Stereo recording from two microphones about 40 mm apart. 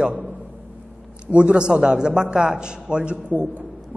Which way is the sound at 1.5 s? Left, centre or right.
Right.